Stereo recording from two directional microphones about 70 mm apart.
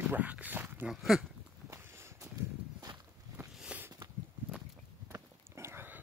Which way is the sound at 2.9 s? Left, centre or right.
Right.